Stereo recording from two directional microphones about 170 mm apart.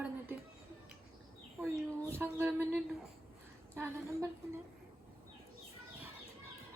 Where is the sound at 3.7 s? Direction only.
15° right (ahead or behind).